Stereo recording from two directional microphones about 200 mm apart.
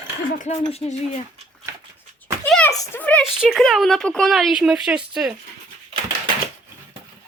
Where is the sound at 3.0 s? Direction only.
5° left (ahead or behind).